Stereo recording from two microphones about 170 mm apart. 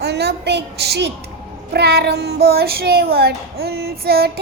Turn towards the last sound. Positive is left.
turn(degrees=-65)  # may be behind; listen again after turning